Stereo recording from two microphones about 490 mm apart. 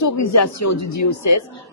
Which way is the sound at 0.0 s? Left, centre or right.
Left.